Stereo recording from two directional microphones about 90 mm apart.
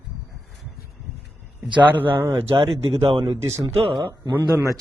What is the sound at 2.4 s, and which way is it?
Speech, 90° right.